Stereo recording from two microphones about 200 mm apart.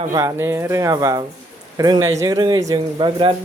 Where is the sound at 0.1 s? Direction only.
15° right (ahead or behind).